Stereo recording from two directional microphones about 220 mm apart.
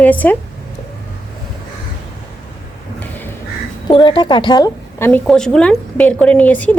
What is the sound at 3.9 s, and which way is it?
A woman's voice, 20° left (ahead or behind).